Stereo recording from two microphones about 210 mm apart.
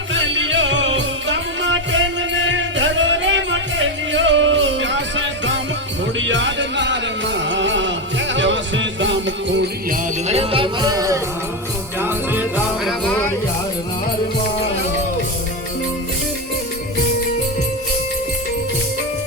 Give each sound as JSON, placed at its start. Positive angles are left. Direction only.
{"t": 0.1, "sound": "music", "side_deg": -65}
{"t": 10.2, "sound": "music", "side_deg": -30}